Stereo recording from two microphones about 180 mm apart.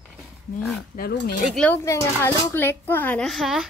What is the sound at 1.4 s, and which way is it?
Speech, 5° left (ahead or behind).